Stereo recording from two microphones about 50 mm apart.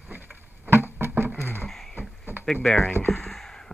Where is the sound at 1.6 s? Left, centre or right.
Centre.